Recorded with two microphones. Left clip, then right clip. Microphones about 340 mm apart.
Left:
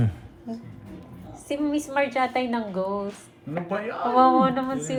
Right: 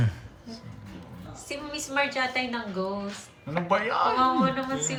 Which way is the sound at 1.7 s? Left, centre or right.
Centre.